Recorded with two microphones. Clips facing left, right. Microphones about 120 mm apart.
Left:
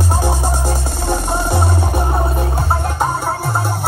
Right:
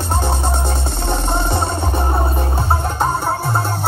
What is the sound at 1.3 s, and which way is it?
Music, centre (ahead or behind).